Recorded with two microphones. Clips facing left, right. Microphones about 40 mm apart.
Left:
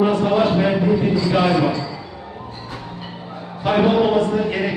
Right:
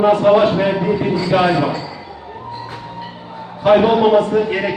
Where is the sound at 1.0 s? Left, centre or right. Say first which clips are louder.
Right 2 dB; right.